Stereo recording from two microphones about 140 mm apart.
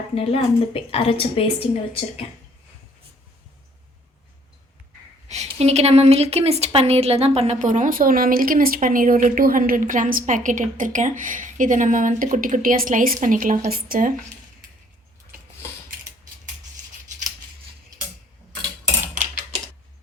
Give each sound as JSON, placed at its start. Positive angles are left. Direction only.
{"t": 0.1, "sound": "a woman's voice", "side_deg": 45}
{"t": 5.3, "sound": "a woman's voice", "side_deg": -50}